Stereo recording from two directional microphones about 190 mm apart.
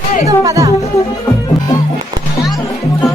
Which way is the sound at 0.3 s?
15° right (ahead or behind).